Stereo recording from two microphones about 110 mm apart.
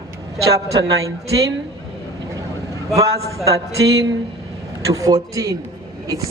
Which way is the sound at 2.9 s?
30° right (ahead or behind).